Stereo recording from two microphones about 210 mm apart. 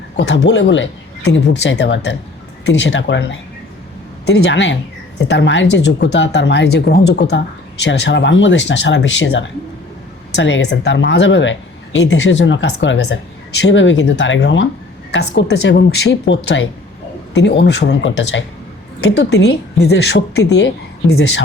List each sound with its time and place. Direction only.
0.2 s speech: 55° left (ahead or behind)